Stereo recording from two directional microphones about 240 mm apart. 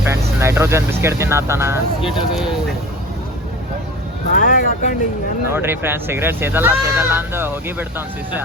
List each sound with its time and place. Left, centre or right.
0.1 s speech: centre
4.3 s speech: left
5.5 s speech: centre